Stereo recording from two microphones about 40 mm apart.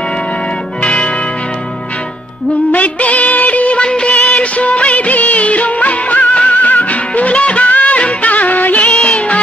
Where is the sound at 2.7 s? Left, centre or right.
Left.